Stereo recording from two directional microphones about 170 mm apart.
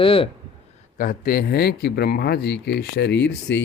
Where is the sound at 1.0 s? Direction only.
55° left (ahead or behind).